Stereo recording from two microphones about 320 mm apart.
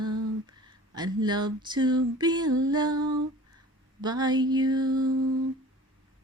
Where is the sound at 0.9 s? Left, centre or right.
Centre.